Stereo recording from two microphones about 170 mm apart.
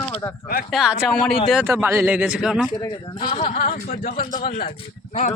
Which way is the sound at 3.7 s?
50° left (ahead or behind).